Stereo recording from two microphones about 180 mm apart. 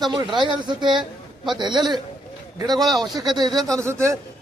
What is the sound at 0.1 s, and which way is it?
Speech, 25° right (ahead or behind).